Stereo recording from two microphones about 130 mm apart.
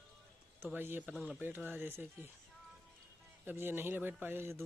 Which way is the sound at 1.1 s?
Centre (ahead or behind).